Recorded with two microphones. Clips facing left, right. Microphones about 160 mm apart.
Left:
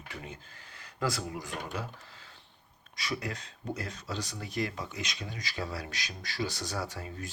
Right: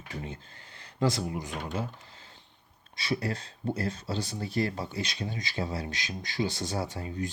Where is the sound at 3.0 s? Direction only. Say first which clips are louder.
Right 5 dB; 30° right (ahead or behind).